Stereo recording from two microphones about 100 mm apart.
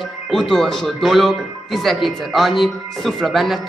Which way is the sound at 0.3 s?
5° left (ahead or behind).